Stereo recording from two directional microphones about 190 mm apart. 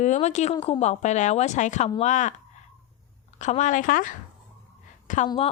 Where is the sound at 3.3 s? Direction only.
40° left (ahead or behind).